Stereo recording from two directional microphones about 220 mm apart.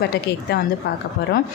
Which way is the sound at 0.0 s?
45° left (ahead or behind).